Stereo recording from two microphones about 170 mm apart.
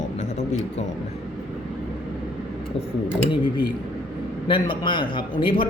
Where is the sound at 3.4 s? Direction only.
25° left (ahead or behind).